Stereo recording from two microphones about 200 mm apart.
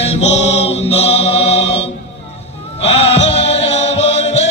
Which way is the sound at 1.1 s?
65° left (ahead or behind).